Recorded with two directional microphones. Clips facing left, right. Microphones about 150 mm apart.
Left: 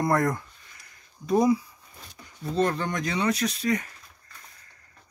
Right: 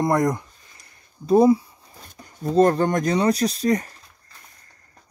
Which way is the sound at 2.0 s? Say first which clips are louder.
Right 7 dB; 45° right (ahead or behind).